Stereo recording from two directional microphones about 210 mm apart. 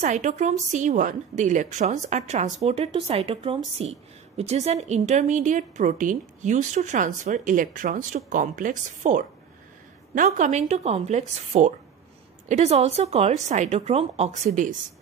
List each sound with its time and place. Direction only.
0.0 s a woman's voice: 35° right (ahead or behind)